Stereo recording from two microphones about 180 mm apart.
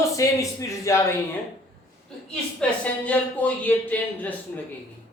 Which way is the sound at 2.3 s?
5° left (ahead or behind).